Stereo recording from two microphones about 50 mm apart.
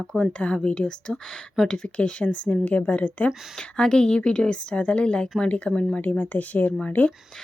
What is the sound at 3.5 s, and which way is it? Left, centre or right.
Speech, centre.